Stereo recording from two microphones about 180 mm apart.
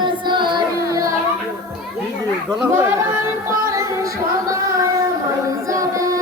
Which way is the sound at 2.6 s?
15° right (ahead or behind).